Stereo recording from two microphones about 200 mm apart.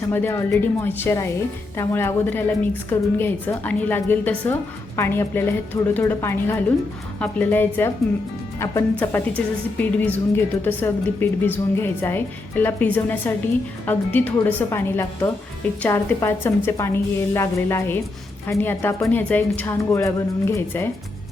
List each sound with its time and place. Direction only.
0.1 s a woman's voice: 10° left (ahead or behind)